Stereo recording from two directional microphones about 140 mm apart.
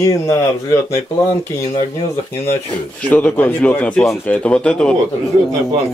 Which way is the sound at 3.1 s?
10° left (ahead or behind).